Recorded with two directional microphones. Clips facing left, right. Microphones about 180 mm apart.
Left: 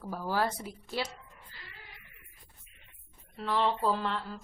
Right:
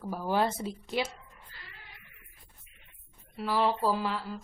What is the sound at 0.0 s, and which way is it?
Speech, 15° right (ahead or behind).